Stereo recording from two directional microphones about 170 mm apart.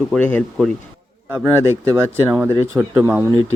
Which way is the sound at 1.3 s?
15° right (ahead or behind).